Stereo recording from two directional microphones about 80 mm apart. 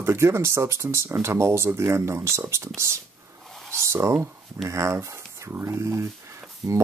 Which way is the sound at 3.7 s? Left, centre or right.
Right.